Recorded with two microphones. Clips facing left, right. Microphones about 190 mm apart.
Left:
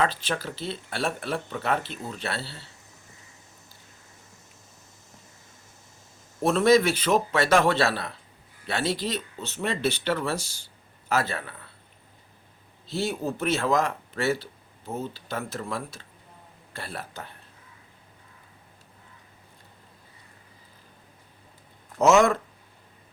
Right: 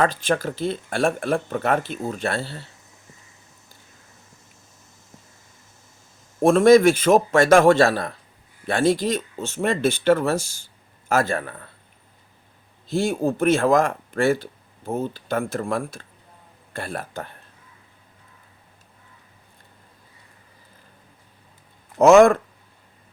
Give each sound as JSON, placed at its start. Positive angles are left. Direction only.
{"t": 0.0, "sound": "speech", "side_deg": -50}
{"t": 6.4, "sound": "speech", "side_deg": -50}
{"t": 12.9, "sound": "speech", "side_deg": -50}
{"t": 21.9, "sound": "speech", "side_deg": -55}